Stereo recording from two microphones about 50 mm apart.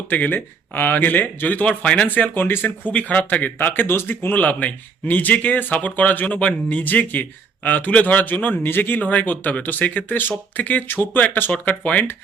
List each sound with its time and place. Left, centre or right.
0.1 s speech: left
1.6 s speech: left
2.0 s speech: left
2.9 s speech: left
11.5 s speech: left